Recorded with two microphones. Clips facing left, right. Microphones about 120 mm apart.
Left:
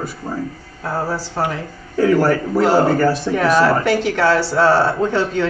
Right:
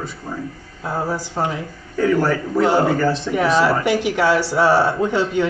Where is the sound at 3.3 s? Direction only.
15° right (ahead or behind).